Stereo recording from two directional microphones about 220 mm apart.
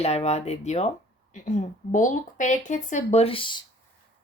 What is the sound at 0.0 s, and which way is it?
Speech, 30° left (ahead or behind).